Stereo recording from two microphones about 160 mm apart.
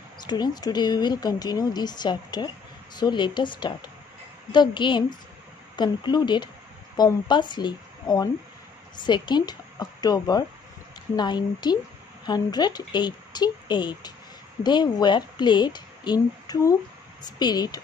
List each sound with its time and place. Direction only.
0.2 s speech: 25° left (ahead or behind)